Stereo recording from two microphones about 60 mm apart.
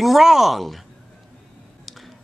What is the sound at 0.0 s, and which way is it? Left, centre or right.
Speech, centre.